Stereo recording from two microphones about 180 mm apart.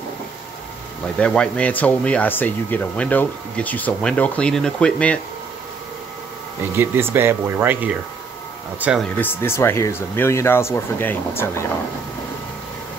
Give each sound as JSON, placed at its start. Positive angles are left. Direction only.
{"t": 1.1, "sound": "speech", "side_deg": 5}
{"t": 6.8, "sound": "speech", "side_deg": -10}
{"t": 9.2, "sound": "speech", "side_deg": 15}